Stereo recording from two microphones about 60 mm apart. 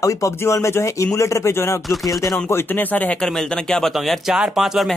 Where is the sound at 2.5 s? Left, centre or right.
Left.